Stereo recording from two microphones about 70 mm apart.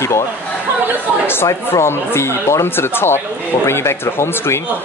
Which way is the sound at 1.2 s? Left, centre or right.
Left.